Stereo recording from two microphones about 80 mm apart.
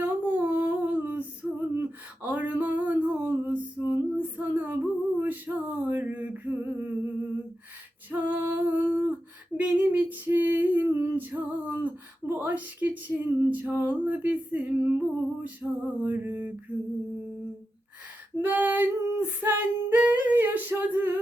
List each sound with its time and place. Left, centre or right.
0.0 s a sound: right
8.1 s female singing: right
18.4 s female singing: right